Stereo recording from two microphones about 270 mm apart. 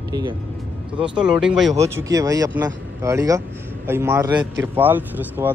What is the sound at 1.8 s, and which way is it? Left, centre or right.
Speech, centre.